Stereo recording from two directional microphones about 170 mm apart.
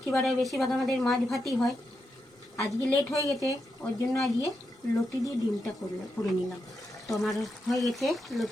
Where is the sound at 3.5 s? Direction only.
20° left (ahead or behind).